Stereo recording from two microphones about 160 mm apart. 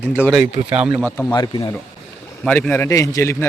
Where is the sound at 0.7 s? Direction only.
5° right (ahead or behind).